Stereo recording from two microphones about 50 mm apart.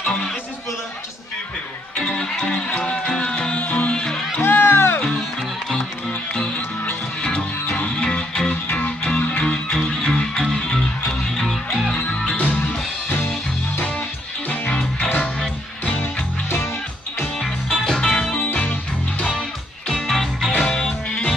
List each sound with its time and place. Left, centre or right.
0.0 s music: left
2.0 s music: centre
4.4 s music: left
6.0 s music: centre
8.6 s music: left
9.4 s music: centre
11.9 s music: left
15.0 s music: left
17.7 s music: centre
18.3 s music: left
19.9 s music: centre